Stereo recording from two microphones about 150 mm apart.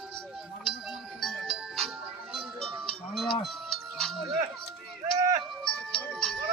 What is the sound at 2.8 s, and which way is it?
Livestock, centre (ahead or behind).